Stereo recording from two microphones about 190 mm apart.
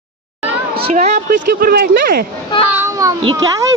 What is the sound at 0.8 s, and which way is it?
Speech, 40° right (ahead or behind).